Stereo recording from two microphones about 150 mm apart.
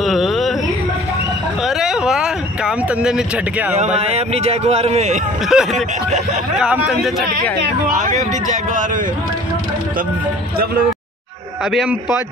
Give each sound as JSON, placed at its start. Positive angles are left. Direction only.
{"t": 0.0, "sound": "a sound", "side_deg": 0}
{"t": 1.6, "sound": "a sound", "side_deg": 0}
{"t": 3.7, "sound": "speech", "side_deg": -45}
{"t": 5.5, "sound": "a man's voice", "side_deg": 0}
{"t": 8.0, "sound": "speech", "side_deg": -55}
{"t": 11.7, "sound": "a man's voice", "side_deg": 0}